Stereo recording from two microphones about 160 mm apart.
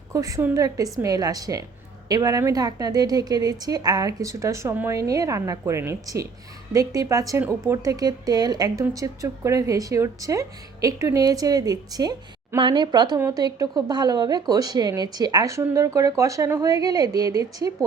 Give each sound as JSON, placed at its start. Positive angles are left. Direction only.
{"t": 0.1, "sound": "speech", "side_deg": -20}